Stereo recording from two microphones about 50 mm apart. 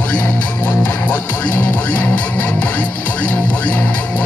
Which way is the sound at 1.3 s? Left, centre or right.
Left.